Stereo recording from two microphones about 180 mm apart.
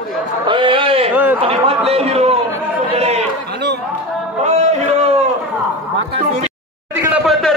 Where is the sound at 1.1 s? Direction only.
10° right (ahead or behind).